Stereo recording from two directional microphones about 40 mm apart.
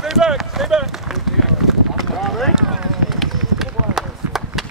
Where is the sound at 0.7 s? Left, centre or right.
Centre.